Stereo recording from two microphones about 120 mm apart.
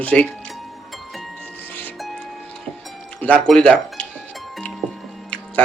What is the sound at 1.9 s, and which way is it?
Music, centre (ahead or behind).